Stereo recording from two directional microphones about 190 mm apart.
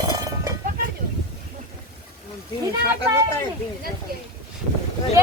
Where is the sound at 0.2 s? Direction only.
20° right (ahead or behind).